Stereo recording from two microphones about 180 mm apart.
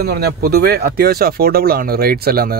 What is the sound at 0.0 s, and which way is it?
Speech, 60° right (ahead or behind).